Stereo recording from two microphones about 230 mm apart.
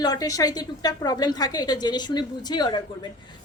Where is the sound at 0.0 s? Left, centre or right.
Centre.